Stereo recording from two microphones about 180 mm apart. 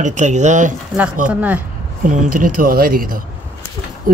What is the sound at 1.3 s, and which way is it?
Speech, 10° right (ahead or behind).